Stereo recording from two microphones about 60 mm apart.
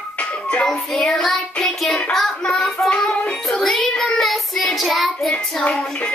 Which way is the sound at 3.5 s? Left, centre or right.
Centre.